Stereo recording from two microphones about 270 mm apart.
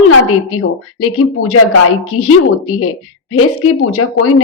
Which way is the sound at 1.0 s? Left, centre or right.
Left.